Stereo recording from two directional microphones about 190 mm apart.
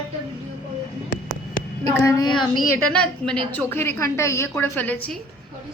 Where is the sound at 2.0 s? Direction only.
20° left (ahead or behind).